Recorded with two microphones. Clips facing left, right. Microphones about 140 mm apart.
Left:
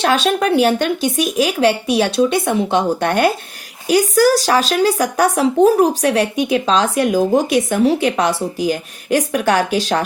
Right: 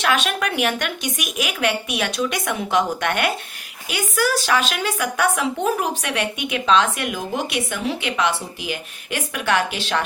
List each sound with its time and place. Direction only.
0.0 s speech: 35° left (ahead or behind)